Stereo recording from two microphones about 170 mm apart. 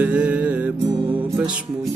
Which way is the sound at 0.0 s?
5° right (ahead or behind).